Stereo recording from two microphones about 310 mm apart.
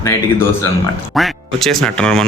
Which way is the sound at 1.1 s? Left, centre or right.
Centre.